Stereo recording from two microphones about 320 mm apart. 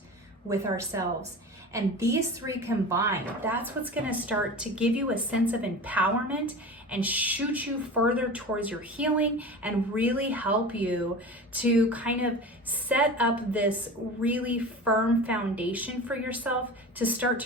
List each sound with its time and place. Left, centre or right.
0.4 s a woman's voice: centre
2.5 s a woman's voice: centre